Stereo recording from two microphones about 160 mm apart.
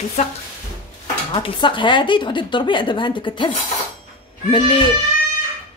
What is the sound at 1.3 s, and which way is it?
A woman's voice, 30° left (ahead or behind).